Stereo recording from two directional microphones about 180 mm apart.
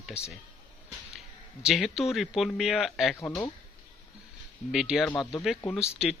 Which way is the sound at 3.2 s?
15° left (ahead or behind).